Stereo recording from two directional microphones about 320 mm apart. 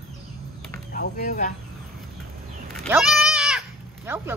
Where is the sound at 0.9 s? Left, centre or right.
Left.